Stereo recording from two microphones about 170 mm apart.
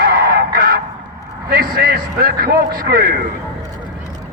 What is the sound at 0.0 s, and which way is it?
Honk, 60° right (ahead or behind).